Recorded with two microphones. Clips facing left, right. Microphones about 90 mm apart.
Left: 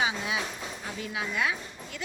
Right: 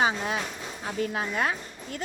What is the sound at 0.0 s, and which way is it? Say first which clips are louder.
A woman's voice: right 3 dB; 45° right (ahead or behind).